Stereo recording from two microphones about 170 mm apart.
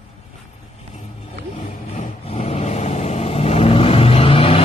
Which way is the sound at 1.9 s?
40° left (ahead or behind).